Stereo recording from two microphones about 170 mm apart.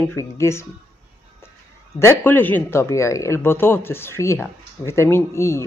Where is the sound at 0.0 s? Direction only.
15° left (ahead or behind).